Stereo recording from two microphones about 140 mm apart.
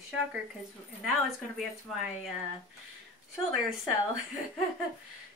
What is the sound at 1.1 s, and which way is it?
A woman's voice, 5° right (ahead or behind).